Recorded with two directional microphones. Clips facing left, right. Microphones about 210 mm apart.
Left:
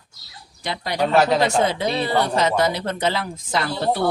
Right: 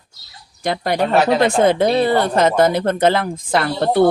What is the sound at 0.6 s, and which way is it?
Speech, 50° right (ahead or behind).